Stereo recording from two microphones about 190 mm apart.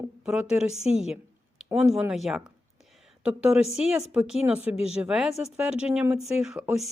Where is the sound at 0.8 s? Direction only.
35° left (ahead or behind).